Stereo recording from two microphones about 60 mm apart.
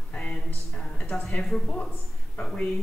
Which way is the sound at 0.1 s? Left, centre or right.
Centre.